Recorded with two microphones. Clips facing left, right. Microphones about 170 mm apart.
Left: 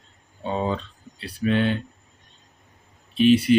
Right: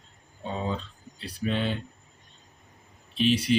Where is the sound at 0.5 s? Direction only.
70° left (ahead or behind).